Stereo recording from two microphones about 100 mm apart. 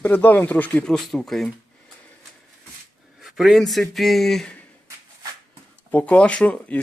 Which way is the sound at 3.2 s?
Centre (ahead or behind).